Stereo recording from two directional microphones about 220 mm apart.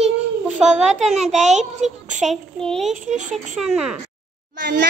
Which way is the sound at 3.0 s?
35° right (ahead or behind).